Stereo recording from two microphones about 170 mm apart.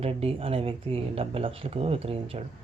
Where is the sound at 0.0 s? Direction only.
35° right (ahead or behind).